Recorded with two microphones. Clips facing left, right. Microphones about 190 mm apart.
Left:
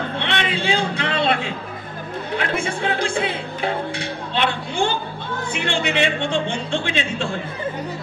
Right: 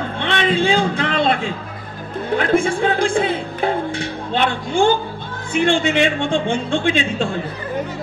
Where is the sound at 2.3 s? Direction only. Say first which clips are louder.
Right 8 dB; 50° right (ahead or behind).